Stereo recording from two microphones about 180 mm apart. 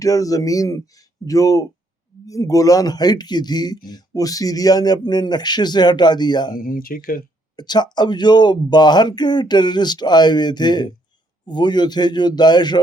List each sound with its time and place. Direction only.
0.0 s speech: 20° left (ahead or behind)
6.6 s speech: 50° left (ahead or behind)
7.5 s speech: 25° left (ahead or behind)